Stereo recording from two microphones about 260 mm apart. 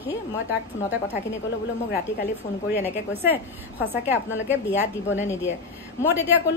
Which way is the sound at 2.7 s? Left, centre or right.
Centre.